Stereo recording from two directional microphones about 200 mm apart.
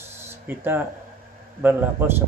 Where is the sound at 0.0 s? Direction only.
10° right (ahead or behind).